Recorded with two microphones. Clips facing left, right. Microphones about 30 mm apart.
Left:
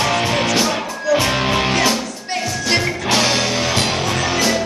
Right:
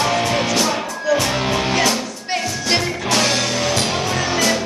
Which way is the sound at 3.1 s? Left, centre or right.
Centre.